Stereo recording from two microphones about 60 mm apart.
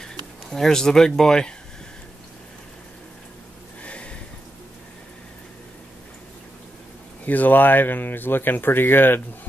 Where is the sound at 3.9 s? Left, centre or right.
Centre.